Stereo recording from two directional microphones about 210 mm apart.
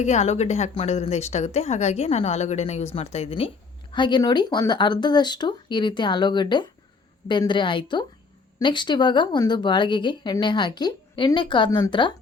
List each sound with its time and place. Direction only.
0.0 s a woman's voice: 35° left (ahead or behind)